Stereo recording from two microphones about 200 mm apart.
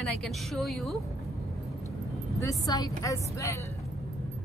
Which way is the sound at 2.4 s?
15° left (ahead or behind).